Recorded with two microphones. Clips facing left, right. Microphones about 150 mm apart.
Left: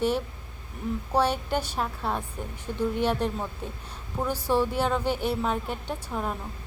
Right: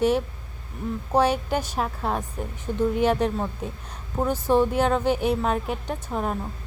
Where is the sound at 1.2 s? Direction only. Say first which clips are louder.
Right 3 dB; 5° right (ahead or behind).